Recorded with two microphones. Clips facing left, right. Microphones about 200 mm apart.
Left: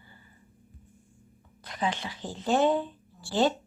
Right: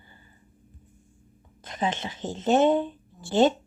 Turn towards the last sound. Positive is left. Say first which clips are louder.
# right 5 dB
turn(degrees=-20)  # may be behind; listen again after turning